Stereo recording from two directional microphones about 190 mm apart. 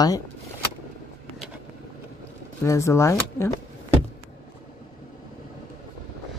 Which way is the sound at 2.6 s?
15° left (ahead or behind).